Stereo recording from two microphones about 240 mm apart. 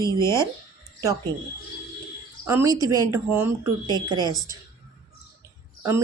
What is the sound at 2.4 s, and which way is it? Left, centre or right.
Speech, centre.